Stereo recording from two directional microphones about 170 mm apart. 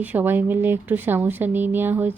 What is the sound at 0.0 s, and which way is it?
Speech, 10° right (ahead or behind).